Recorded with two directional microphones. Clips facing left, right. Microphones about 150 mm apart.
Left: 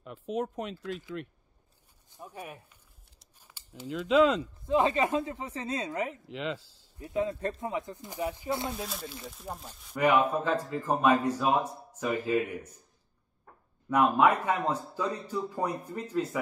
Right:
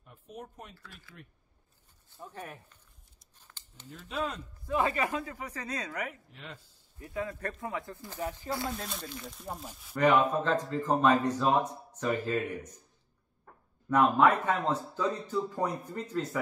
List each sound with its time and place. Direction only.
0.0 s speech: 90° left
2.0 s speech: 15° left (ahead or behind)
3.3 s a sound: 10° left (ahead or behind)
3.8 s speech: 90° left
4.6 s speech: 20° left (ahead or behind)
6.2 s speech: 90° left
7.0 s speech: 20° left (ahead or behind)
8.7 s speech: centre (ahead or behind)
9.9 s a man's voice: 10° left (ahead or behind)
13.8 s a man's voice: 10° left (ahead or behind)